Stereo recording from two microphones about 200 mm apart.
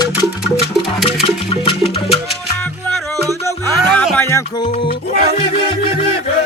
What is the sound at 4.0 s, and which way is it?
Music, 5° left (ahead or behind).